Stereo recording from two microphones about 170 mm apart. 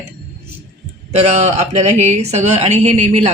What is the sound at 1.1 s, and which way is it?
A woman's voice, 40° right (ahead or behind).